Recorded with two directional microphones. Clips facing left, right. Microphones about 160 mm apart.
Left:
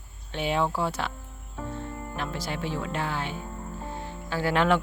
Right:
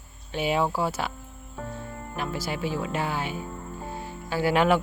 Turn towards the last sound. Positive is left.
turn(degrees=-10)  # may be behind; listen again after turning